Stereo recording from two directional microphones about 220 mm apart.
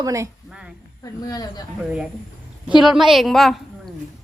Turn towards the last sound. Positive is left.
turn(degrees=0)  # may be behind; listen again after turning